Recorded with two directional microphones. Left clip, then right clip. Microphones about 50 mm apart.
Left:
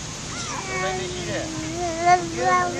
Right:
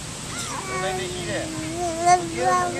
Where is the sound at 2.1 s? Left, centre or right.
Right.